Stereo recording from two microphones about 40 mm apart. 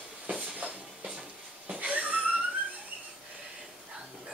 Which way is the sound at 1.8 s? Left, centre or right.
Right.